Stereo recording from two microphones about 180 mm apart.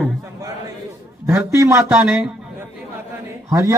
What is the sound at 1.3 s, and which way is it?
Speech, 15° right (ahead or behind).